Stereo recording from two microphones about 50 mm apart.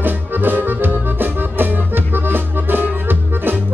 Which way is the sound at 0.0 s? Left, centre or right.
Right.